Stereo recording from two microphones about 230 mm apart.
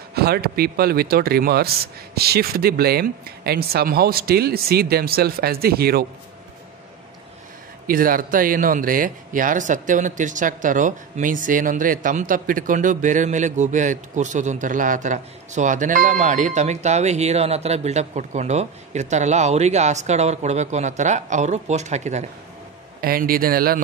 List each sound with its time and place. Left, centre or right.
0.1 s speech: right
7.8 s speech: right